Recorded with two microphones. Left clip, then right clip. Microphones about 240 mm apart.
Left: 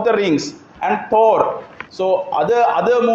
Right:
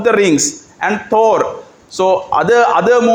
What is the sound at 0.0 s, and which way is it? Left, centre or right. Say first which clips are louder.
A man's voice: right 4 dB; right.